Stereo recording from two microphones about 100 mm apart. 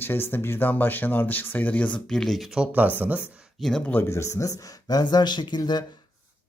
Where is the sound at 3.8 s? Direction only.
20° left (ahead or behind); by 5.9 s 45° left (ahead or behind).